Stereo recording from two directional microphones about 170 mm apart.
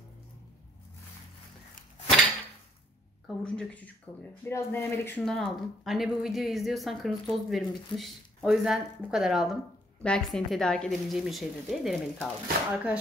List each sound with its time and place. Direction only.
3.3 s speech: 5° left (ahead or behind)
5.2 s speech: centre (ahead or behind)